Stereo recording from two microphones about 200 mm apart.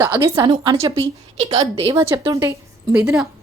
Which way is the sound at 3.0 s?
5° right (ahead or behind).